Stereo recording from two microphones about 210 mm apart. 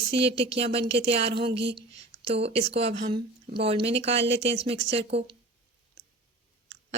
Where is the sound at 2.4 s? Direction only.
30° right (ahead or behind).